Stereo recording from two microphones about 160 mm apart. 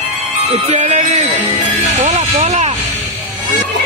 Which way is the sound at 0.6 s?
45° right (ahead or behind).